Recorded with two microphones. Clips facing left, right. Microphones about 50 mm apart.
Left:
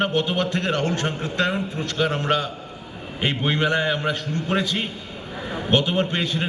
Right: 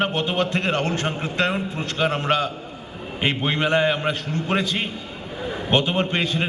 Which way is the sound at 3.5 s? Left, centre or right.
Right.